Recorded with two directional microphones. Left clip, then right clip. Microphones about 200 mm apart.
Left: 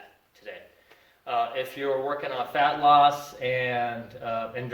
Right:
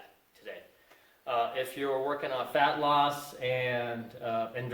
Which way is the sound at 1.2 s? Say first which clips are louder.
Left 3 dB; 15° right (ahead or behind).